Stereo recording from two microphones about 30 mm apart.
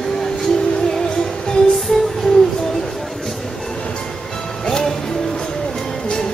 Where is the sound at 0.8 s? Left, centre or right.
Left.